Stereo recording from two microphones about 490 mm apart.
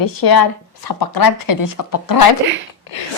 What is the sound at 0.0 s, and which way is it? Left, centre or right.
Speech, left.